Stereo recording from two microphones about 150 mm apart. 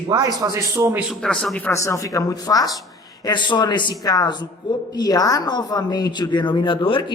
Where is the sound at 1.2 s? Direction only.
5° left (ahead or behind).